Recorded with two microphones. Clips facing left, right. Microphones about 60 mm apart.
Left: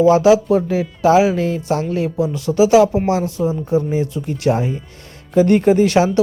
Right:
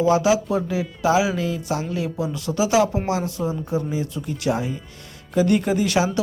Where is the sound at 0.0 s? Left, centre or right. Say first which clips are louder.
Left 7 dB; left.